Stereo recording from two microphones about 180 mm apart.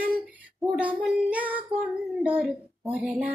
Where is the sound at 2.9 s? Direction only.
10° right (ahead or behind).